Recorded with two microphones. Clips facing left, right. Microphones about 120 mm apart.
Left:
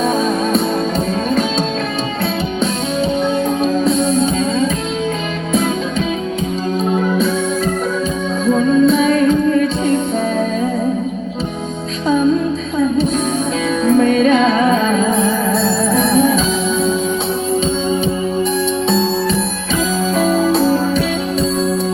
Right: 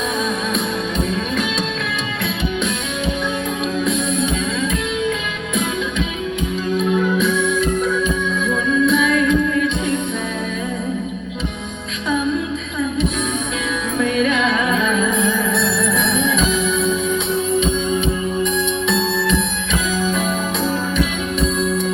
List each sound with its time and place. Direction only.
3.6 s music: 35° left (ahead or behind)
6.7 s music: 35° left (ahead or behind)
8.4 s music: 35° left (ahead or behind)
12.0 s music: 35° left (ahead or behind)
13.8 s music: 35° left (ahead or behind)
18.9 s music: 35° left (ahead or behind)